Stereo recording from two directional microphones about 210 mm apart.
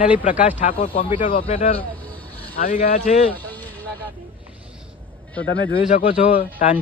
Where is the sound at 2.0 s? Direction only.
10° left (ahead or behind).